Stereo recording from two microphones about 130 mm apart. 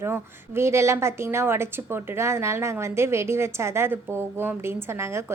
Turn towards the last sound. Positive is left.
turn(degrees=-20)  # may be behind; listen again after turning